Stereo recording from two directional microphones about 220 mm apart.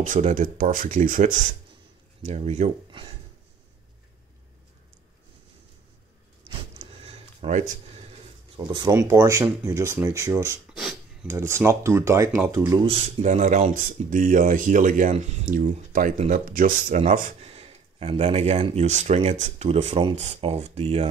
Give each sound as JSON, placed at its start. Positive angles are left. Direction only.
{"t": 0.0, "sound": "speech", "side_deg": -35}
{"t": 6.8, "sound": "a sound", "side_deg": -25}
{"t": 8.7, "sound": "speech", "side_deg": -15}
{"t": 10.7, "sound": "filing", "side_deg": 0}
{"t": 11.2, "sound": "speech", "side_deg": -10}
{"t": 12.8, "sound": "speech", "side_deg": -25}